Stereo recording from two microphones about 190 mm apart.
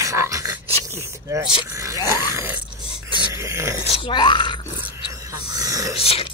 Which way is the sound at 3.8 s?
30° left (ahead or behind).